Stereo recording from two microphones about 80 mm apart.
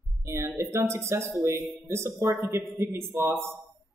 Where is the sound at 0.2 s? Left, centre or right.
Right.